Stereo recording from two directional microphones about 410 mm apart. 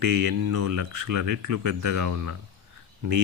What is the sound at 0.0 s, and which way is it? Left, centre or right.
Speech, right.